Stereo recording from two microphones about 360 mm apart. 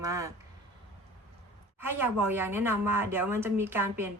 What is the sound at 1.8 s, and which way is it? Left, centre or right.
A woman's voice, centre.